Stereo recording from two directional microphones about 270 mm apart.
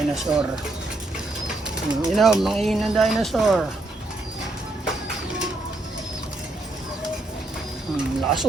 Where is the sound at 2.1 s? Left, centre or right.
Centre.